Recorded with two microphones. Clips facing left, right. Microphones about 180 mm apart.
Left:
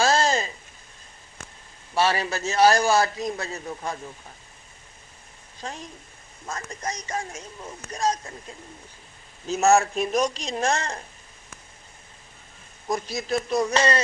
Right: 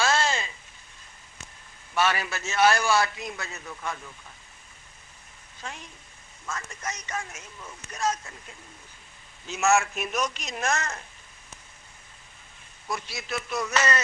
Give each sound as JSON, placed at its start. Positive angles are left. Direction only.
{"t": 0.0, "sound": "a sound", "side_deg": 35}
{"t": 2.0, "sound": "a man's voice", "side_deg": 30}
{"t": 5.5, "sound": "a man's voice", "side_deg": 35}
{"t": 12.9, "sound": "a man's voice", "side_deg": 35}